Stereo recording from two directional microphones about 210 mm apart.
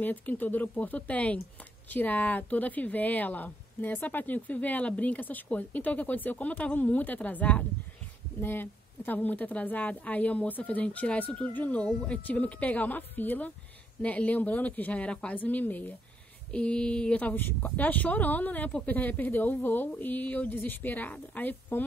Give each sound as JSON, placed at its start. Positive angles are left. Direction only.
{"t": 0.0, "sound": "speech", "side_deg": 10}